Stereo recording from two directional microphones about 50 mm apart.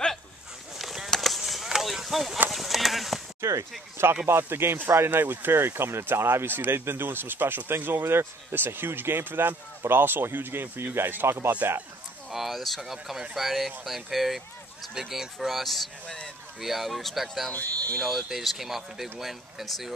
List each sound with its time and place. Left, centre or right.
0.7 s a sound: centre
3.3 s speech: right
4.3 s speech: right
12.3 s speech: centre